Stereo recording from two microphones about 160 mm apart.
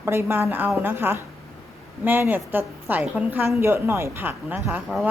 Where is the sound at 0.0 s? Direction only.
15° right (ahead or behind).